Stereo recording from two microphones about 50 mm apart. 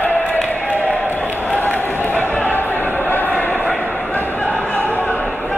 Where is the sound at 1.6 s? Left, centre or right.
Left.